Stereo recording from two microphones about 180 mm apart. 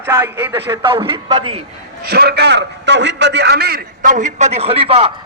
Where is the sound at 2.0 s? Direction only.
60° right (ahead or behind).